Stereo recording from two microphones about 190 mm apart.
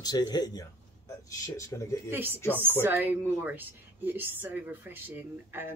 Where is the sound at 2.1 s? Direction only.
10° right (ahead or behind).